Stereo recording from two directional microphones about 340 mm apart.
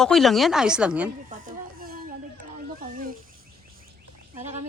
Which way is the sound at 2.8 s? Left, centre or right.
Right.